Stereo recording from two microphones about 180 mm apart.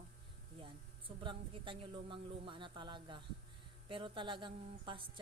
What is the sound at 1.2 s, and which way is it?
A woman's voice, 25° right (ahead or behind).